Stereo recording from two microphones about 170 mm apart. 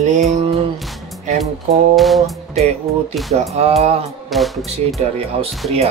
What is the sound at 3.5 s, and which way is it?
Speech, 40° right (ahead or behind).